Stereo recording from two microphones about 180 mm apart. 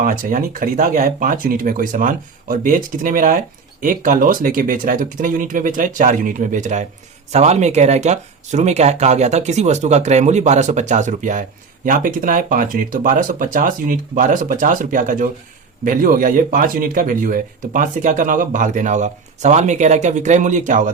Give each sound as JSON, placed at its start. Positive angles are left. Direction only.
{"t": 0.0, "sound": "speech", "side_deg": -50}